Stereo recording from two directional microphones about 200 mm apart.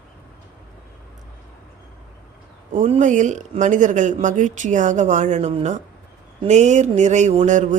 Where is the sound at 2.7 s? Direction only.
35° right (ahead or behind).